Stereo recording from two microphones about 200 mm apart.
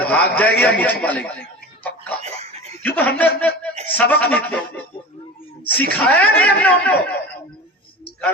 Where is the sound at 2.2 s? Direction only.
30° right (ahead or behind).